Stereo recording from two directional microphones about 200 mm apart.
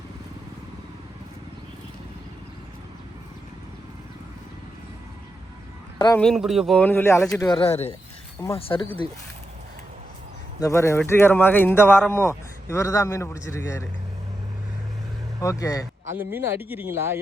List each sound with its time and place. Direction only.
6.1 s speech: centre (ahead or behind); by 7.6 s 15° left (ahead or behind)
7.6 s speech: 30° left (ahead or behind)
10.6 s speech: 15° left (ahead or behind)
15.4 s speech: 15° left (ahead or behind)
16.1 s speech: 10° right (ahead or behind)